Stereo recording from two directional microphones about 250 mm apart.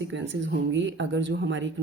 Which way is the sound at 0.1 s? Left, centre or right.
Right.